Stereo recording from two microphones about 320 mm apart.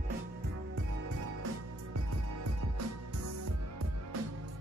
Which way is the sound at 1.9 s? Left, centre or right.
Right.